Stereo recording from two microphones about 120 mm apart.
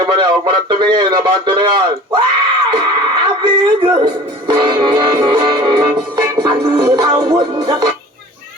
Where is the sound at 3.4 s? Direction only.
45° right (ahead or behind).